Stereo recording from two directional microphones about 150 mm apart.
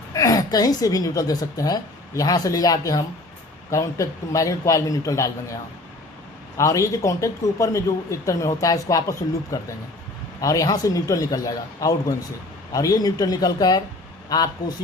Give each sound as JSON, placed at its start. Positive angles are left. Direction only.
{"t": 0.1, "sound": "a man's voice", "side_deg": 25}
{"t": 6.6, "sound": "a man's voice", "side_deg": 20}